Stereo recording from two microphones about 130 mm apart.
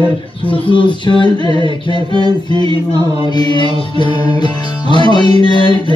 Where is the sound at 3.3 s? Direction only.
35° left (ahead or behind).